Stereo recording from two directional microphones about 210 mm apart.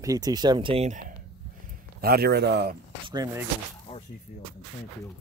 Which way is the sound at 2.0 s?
45° right (ahead or behind).